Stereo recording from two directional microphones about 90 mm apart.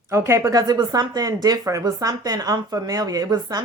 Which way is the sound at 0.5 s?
50° right (ahead or behind).